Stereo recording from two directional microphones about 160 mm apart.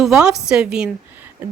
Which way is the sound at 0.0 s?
5° right (ahead or behind).